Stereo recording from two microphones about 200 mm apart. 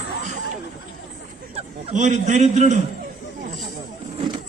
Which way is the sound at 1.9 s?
35° right (ahead or behind).